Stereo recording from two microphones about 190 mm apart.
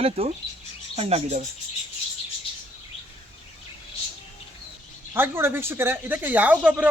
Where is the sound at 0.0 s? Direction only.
30° right (ahead or behind).